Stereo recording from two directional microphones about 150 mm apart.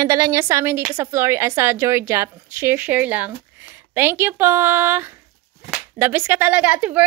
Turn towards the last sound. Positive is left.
turn(degrees=-10)  # may be behind; listen again after turning